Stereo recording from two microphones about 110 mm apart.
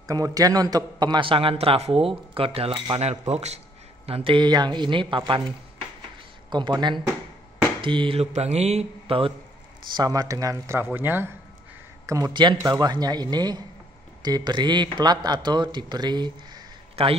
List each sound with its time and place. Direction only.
0.1 s a man's voice: 35° right (ahead or behind); by 3.0 s 55° right (ahead or behind)
3.0 s a man's voice: 75° right (ahead or behind); by 5.4 s 50° right (ahead or behind)
6.5 s a man's voice: 45° right (ahead or behind)
8.2 s a man's voice: 80° right; by 9.3 s 55° right (ahead or behind)
9.9 s speech: 35° right (ahead or behind)
12.1 s speech: 35° right (ahead or behind)
17.0 s a man's voice: 60° right (ahead or behind)